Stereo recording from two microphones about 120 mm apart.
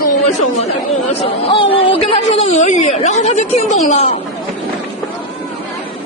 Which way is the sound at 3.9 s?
65° left (ahead or behind).